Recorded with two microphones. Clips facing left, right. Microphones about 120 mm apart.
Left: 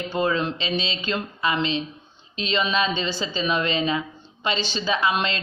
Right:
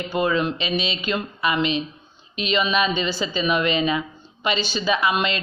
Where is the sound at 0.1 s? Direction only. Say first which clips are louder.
Right 2 dB; 10° right (ahead or behind).